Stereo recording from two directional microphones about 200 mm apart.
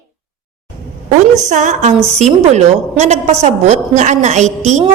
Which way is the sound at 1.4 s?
40° right (ahead or behind).